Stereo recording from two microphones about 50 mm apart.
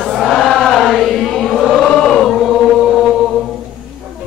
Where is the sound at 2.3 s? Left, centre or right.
Centre.